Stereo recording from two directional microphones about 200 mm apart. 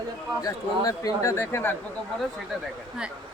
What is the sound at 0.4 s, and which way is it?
Speech, 15° left (ahead or behind).